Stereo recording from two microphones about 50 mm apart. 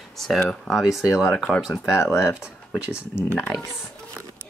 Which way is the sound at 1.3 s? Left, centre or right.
Centre.